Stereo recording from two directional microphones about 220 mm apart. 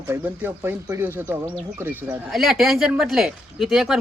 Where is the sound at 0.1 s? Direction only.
10° right (ahead or behind).